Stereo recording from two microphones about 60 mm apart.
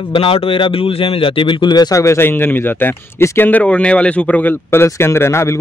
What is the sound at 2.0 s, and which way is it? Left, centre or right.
A man's voice, left.